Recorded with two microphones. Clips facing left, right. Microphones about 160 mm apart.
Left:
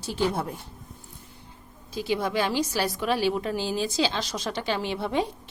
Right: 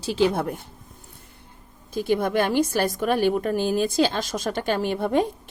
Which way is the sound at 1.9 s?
50° right (ahead or behind).